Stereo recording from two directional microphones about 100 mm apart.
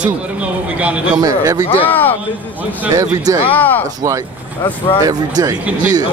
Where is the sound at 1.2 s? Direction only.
40° right (ahead or behind).